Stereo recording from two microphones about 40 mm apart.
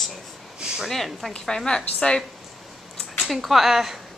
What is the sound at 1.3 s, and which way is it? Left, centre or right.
Speech, centre.